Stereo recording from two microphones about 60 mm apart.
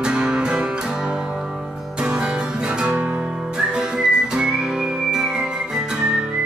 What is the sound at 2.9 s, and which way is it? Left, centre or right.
Music, right.